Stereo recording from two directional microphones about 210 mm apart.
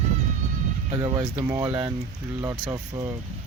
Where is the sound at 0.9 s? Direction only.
20° right (ahead or behind).